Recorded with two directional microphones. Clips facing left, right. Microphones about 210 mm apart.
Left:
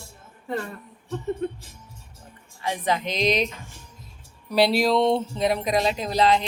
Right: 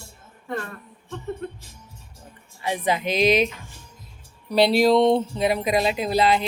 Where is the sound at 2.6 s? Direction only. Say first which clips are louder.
Right 1 dB; 10° right (ahead or behind).